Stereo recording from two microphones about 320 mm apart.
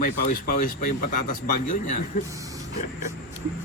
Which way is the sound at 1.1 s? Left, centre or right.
Left.